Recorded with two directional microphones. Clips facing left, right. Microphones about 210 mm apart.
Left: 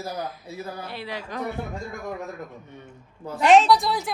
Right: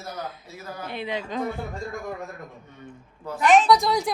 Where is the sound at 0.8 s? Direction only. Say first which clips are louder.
Right 3 dB; 20° right (ahead or behind).